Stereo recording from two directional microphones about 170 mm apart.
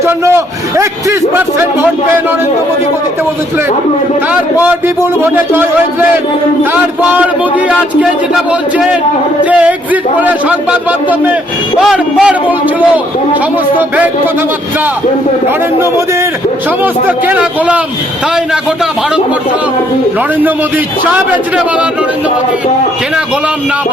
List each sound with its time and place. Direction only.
0.0 s a sound: 15° right (ahead or behind)
4.3 s a man's voice: 10° right (ahead or behind)
9.4 s a man's voice: 10° right (ahead or behind)
13.7 s a man's voice: 10° right (ahead or behind)
16.8 s a man's voice: 10° right (ahead or behind)